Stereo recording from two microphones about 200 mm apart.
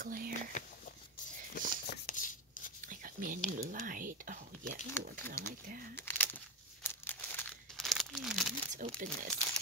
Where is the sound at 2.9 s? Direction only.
45° right (ahead or behind).